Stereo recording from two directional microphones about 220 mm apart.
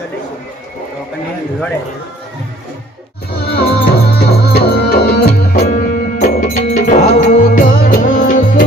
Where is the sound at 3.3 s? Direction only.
45° left (ahead or behind).